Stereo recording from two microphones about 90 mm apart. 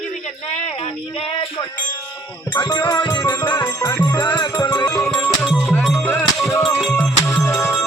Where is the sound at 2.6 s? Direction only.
50° left (ahead or behind).